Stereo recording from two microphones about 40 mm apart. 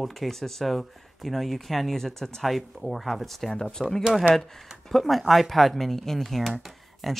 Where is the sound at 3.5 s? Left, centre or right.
Centre.